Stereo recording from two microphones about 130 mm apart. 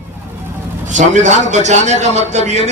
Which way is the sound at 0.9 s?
70° right (ahead or behind).